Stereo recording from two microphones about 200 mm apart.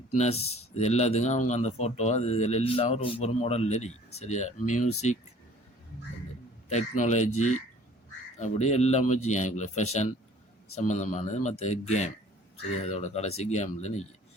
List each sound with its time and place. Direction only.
0.2 s speech: 30° left (ahead or behind)
6.7 s speech: 35° left (ahead or behind)